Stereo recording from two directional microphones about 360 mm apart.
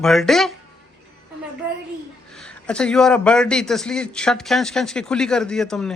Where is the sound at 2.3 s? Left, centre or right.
Centre.